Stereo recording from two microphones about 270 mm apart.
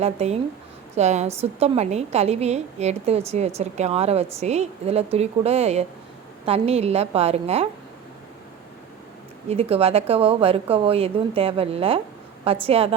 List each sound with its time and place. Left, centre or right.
0.0 s a woman's voice: right
9.5 s a woman's voice: right